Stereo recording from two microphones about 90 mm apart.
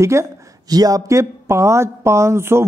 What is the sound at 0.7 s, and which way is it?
Speech, 45° right (ahead or behind).